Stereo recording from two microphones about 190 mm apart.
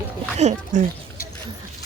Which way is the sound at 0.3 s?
35° right (ahead or behind).